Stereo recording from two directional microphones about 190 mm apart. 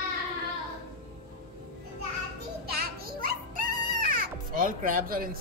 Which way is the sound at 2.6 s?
50° right (ahead or behind).